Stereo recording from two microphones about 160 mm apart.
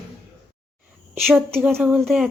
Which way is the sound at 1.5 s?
10° right (ahead or behind).